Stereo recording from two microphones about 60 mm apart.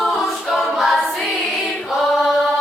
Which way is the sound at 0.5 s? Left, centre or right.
Centre.